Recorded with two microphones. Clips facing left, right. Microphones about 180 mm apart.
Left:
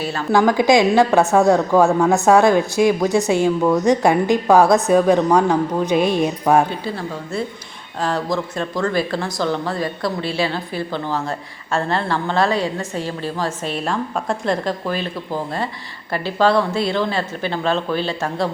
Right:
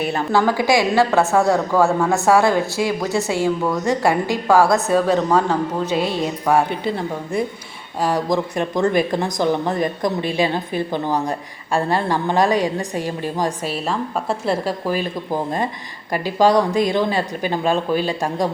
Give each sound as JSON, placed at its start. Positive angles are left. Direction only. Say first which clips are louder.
{"t": 0.3, "sound": "a woman's voice", "louder": "left 4 dB", "side_deg": 15}
{"t": 6.7, "sound": "a woman's voice", "louder": "right 3 dB", "side_deg": -20}
{"t": 13.7, "sound": "speech", "louder": "even", "side_deg": 0}